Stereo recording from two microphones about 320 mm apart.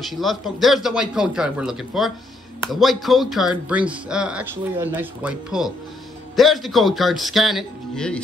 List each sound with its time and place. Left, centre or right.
0.1 s a man's voice: centre